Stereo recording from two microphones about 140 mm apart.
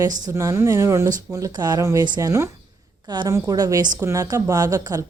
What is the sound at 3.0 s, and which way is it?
A woman's voice, 30° right (ahead or behind).